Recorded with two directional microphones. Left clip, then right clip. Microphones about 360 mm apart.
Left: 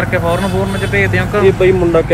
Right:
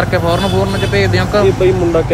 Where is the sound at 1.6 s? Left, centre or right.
Left.